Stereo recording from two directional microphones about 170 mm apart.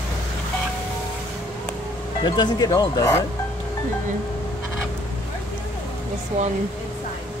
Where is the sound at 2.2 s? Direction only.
25° left (ahead or behind).